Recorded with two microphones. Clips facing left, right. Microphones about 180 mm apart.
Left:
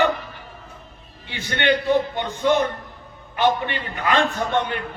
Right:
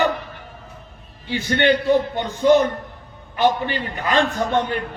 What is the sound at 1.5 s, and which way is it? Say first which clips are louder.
Speech: right 3 dB; 40° right (ahead or behind).